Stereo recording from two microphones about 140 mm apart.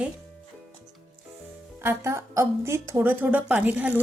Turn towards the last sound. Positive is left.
turn(degrees=-10)  # may be behind; listen again after turning